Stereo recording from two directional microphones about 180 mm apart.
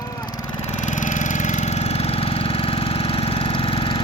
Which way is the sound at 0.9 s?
45° left (ahead or behind).